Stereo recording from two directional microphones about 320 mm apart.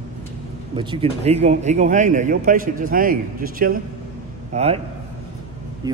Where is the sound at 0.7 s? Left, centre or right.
Centre.